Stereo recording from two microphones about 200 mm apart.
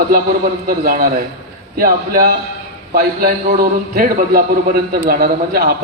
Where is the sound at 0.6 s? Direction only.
45° right (ahead or behind).